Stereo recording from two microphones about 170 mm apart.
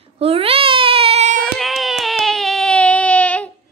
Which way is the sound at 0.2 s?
35° right (ahead or behind).